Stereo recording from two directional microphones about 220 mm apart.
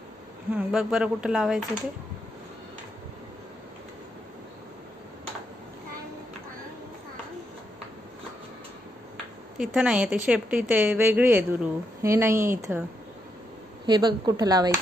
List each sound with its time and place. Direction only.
0.6 s speech: 5° right (ahead or behind)
9.8 s a woman's voice: 5° right (ahead or behind)
13.8 s a woman's voice: 20° right (ahead or behind)